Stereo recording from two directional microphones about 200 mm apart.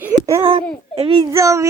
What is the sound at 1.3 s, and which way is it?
Speech, 15° right (ahead or behind).